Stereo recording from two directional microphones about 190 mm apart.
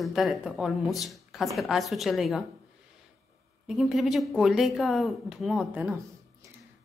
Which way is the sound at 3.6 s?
Centre (ahead or behind).